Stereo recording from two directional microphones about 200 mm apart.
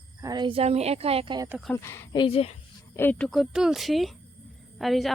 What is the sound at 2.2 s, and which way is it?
Speech, 30° left (ahead or behind).